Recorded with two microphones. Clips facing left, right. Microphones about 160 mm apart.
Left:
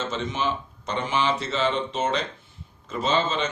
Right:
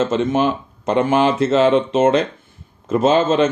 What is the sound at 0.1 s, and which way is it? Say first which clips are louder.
Speech: right 10 dB; 50° right (ahead or behind).